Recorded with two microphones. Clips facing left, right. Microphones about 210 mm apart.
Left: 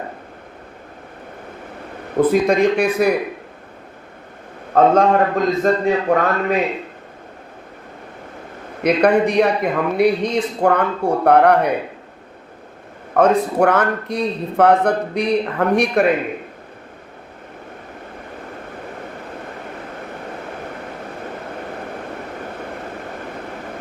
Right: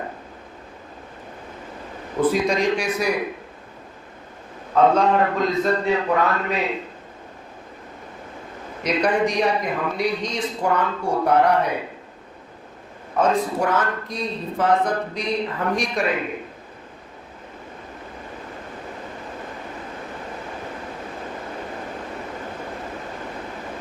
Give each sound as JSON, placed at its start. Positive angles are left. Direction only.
{"t": 2.1, "sound": "a man's voice", "side_deg": 55}
{"t": 4.7, "sound": "a man's voice", "side_deg": 50}
{"t": 8.8, "sound": "a man's voice", "side_deg": 60}
{"t": 13.1, "sound": "a man's voice", "side_deg": 65}